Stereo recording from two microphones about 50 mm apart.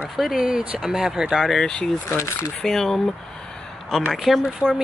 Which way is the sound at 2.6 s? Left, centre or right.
Centre.